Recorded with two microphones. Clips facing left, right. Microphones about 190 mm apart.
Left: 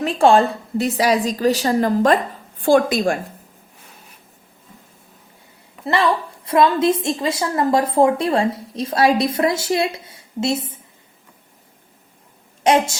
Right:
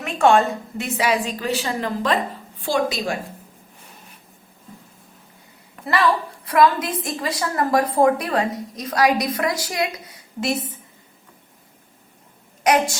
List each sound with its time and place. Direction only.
0.0 s a woman's voice: 30° left (ahead or behind); by 3.2 s 50° left (ahead or behind)
6.4 s a woman's voice: 25° left (ahead or behind)
12.6 s a woman's voice: 25° left (ahead or behind)